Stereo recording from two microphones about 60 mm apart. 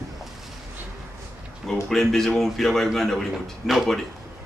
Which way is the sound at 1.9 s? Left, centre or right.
Centre.